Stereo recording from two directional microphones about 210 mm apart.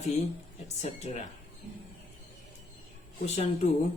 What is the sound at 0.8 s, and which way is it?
Speech, 35° left (ahead or behind).